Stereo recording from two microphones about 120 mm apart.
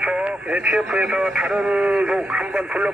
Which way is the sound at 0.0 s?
10° right (ahead or behind).